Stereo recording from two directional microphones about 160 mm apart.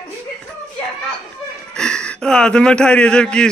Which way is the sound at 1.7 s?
5° left (ahead or behind).